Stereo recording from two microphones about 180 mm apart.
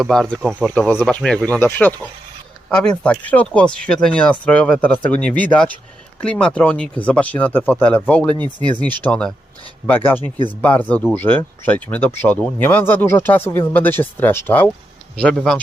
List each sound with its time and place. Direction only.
0.0 s speech: centre (ahead or behind)
8.4 s speech: 25° left (ahead or behind)
9.0 s speech: 5° left (ahead or behind)
10.6 s speech: 10° left (ahead or behind)